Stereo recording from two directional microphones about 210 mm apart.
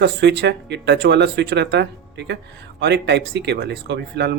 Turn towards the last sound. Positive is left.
turn(degrees=-55)  # may be behind; listen again after turning